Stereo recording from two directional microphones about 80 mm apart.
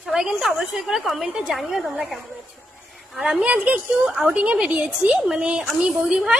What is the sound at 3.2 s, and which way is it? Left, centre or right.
Speech, centre.